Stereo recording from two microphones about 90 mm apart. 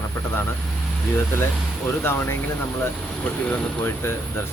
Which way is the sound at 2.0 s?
25° left (ahead or behind).